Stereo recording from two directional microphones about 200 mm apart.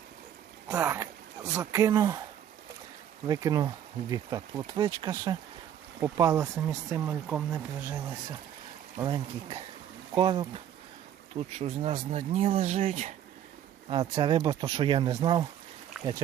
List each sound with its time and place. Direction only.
0.7 s speech: 10° right (ahead or behind)
3.2 s speech: 20° right (ahead or behind)
9.0 s speech: 20° right (ahead or behind)
11.6 s speech: 25° right (ahead or behind)
13.9 s speech: 20° right (ahead or behind)